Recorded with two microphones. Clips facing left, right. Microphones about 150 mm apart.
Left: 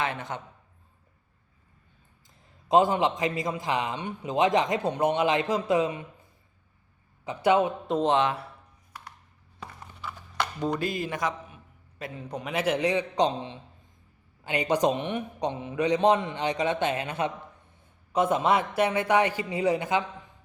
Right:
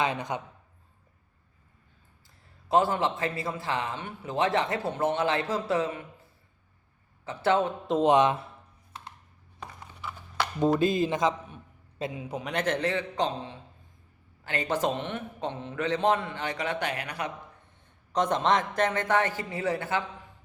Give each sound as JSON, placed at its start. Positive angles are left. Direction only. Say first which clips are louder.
{"t": 0.0, "sound": "a man's voice", "louder": "right 2 dB", "side_deg": -15}
{"t": 2.6, "sound": "a man's voice", "louder": "left 3 dB", "side_deg": 15}
{"t": 7.3, "sound": "a man's voice", "louder": "left 2 dB", "side_deg": 15}
{"t": 8.0, "sound": "speech", "louder": "right 3 dB", "side_deg": -20}
{"t": 10.0, "sound": "horse", "louder": "even", "side_deg": -5}
{"t": 10.8, "sound": "speech", "louder": "right 5 dB", "side_deg": -20}
{"t": 12.1, "sound": "a man's voice", "louder": "left 3 dB", "side_deg": -5}
{"t": 18.1, "sound": "a man's voice", "louder": "left 2 dB", "side_deg": 5}